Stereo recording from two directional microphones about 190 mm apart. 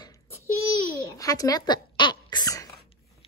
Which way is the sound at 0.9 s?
20° left (ahead or behind).